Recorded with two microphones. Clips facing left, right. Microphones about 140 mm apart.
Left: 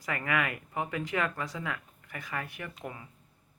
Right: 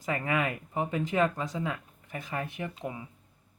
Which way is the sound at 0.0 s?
30° right (ahead or behind).